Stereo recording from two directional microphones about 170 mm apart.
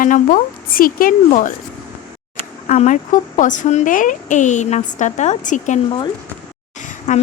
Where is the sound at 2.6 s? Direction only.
45° left (ahead or behind).